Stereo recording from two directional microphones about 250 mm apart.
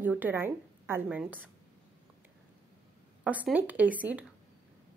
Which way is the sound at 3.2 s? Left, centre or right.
Centre.